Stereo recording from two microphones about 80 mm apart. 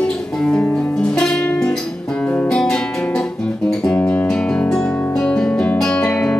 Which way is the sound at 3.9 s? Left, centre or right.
Centre.